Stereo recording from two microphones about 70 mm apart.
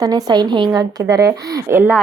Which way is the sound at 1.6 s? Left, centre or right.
Right.